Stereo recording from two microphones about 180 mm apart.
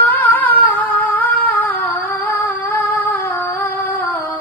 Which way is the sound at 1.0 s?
10° left (ahead or behind).